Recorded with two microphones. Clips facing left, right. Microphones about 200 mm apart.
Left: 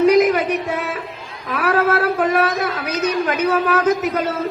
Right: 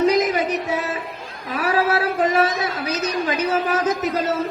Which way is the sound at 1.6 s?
60° left (ahead or behind).